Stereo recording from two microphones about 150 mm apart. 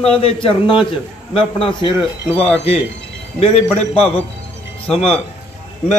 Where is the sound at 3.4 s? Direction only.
40° left (ahead or behind).